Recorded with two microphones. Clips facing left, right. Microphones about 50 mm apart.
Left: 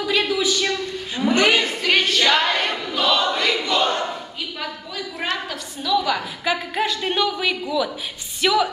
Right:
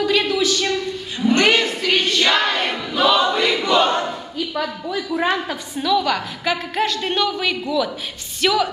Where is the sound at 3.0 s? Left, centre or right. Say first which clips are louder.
Right 3 dB; centre.